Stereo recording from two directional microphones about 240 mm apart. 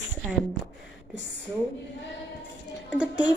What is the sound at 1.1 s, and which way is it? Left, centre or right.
Speech, right.